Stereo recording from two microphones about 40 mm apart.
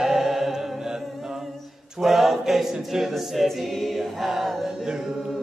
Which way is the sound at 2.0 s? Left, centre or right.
Centre.